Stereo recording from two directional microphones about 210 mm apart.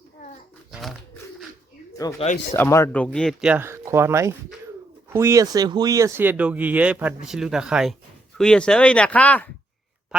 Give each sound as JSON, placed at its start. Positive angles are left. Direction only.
{"t": 0.7, "sound": "pigeon", "side_deg": 0}
{"t": 2.1, "sound": "speech", "side_deg": 35}
{"t": 2.5, "sound": "speech", "side_deg": 15}